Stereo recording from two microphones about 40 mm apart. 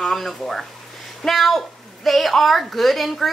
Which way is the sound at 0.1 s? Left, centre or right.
Centre.